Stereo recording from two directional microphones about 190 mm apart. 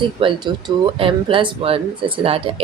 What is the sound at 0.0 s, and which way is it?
Speech, 25° right (ahead or behind).